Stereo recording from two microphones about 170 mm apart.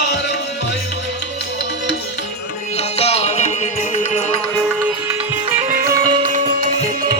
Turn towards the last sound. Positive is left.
turn(degrees=-50)  # may be behind; listen again after turning